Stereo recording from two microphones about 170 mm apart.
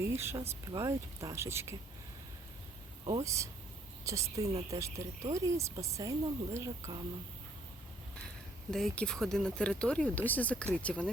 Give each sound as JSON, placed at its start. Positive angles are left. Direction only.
{"t": 0.0, "sound": "speech", "side_deg": -15}
{"t": 3.2, "sound": "a woman's voice", "side_deg": -20}
{"t": 8.7, "sound": "speech", "side_deg": 5}